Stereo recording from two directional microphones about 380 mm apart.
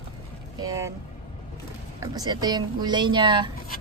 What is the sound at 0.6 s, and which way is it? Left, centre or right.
Speech, centre.